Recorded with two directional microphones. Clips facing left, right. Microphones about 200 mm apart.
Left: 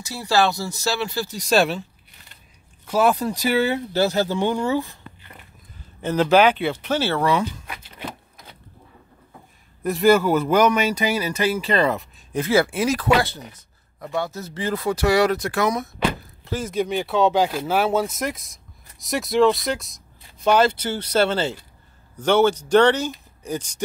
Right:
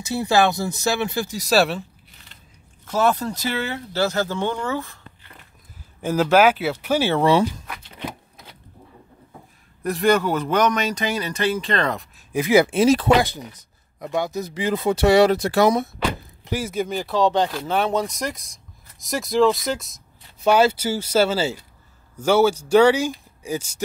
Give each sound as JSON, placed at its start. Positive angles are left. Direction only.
{"t": 0.0, "sound": "speech", "side_deg": -20}
{"t": 1.4, "sound": "speech", "side_deg": -5}
{"t": 2.9, "sound": "speech", "side_deg": 10}
{"t": 6.0, "sound": "speech", "side_deg": -5}
{"t": 7.6, "sound": "a sound", "side_deg": 5}
{"t": 9.8, "sound": "speech", "side_deg": 5}
{"t": 12.3, "sound": "speech", "side_deg": -15}
{"t": 13.2, "sound": "speech", "side_deg": -15}
{"t": 16.4, "sound": "speech", "side_deg": -10}